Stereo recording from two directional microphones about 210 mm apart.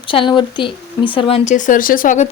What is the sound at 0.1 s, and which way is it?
A woman's voice, 25° left (ahead or behind).